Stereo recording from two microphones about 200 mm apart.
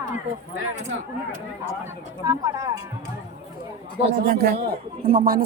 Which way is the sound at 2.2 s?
15° right (ahead or behind).